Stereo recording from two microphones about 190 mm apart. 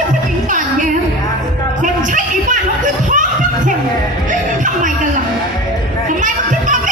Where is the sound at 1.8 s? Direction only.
40° right (ahead or behind).